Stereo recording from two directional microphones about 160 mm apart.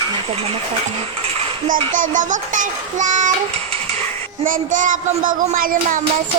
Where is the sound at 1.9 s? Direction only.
55° right (ahead or behind).